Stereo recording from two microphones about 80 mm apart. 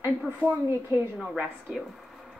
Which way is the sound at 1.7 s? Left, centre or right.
Centre.